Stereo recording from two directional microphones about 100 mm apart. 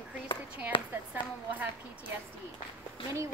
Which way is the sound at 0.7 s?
60° left (ahead or behind).